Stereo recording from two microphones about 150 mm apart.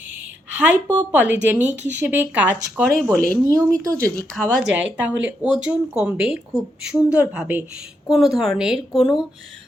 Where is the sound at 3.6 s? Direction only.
20° right (ahead or behind).